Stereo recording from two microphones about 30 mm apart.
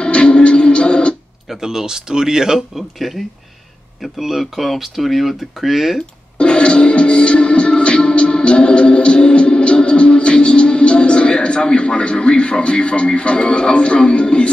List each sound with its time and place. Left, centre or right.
0.0 s music: left
1.6 s speech: centre
3.0 s speech: centre
4.2 s speech: centre
6.3 s music: left